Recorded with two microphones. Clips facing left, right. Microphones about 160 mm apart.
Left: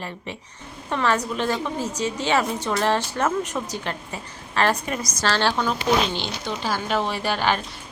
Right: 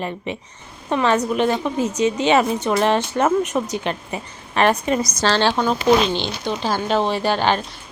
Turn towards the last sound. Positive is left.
turn(degrees=-25)  # may be behind; listen again after turning